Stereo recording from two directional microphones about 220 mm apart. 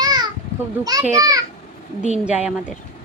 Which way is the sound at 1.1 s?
15° right (ahead or behind).